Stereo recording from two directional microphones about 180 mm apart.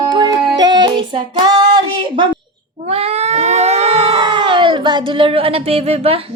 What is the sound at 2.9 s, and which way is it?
Speech, 35° right (ahead or behind).